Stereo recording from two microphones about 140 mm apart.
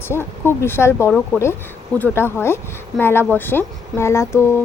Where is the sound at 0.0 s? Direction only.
15° left (ahead or behind).